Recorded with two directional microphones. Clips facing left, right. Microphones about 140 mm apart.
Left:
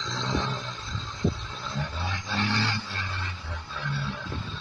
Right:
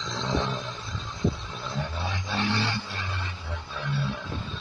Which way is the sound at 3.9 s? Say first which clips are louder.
Right 4 dB; 20° right (ahead or behind).